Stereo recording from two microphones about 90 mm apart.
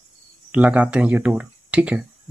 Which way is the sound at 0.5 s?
15° right (ahead or behind).